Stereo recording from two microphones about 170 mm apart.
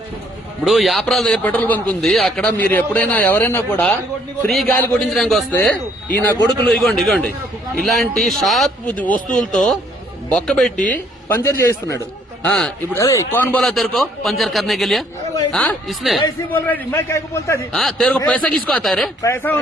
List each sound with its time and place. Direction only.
0.6 s a man's voice: centre (ahead or behind)
4.4 s a man's voice: centre (ahead or behind)
10.8 s speech: 50° left (ahead or behind)
11.3 s a man's voice: 15° left (ahead or behind)
17.7 s a man's voice: 5° left (ahead or behind)
19.2 s a man's voice: 15° left (ahead or behind)